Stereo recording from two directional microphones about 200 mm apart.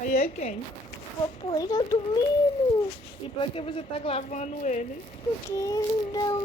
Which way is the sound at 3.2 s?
25° left (ahead or behind).